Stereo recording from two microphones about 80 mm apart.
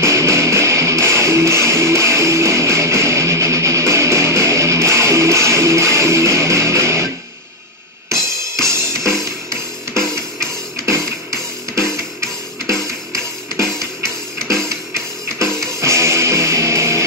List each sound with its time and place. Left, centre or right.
0.0 s music: right
8.1 s drum kit: right
13.6 s music: right